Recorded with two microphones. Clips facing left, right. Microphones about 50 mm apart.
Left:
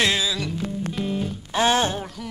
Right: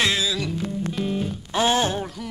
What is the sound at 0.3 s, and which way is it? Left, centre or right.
Music, centre.